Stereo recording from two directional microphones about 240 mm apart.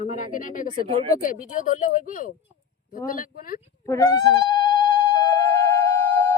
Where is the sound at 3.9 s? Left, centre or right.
Centre.